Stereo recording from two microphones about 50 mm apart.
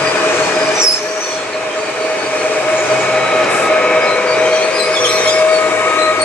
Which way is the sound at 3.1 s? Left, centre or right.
Centre.